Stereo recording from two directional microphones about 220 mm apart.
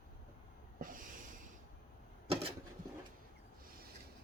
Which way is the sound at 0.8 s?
40° right (ahead or behind).